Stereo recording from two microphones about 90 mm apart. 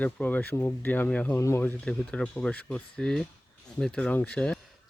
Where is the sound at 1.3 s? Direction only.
30° left (ahead or behind).